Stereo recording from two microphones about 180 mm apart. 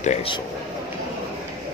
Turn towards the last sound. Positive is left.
turn(degrees=40)  # may be behind; listen again after turning